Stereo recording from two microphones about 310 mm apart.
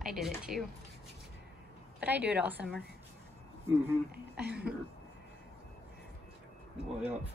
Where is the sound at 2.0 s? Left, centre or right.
Centre.